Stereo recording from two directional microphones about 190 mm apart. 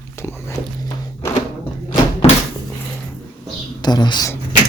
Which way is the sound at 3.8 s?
20° left (ahead or behind).